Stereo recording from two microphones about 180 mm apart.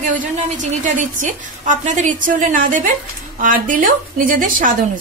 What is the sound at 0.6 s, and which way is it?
A woman's voice, 45° right (ahead or behind).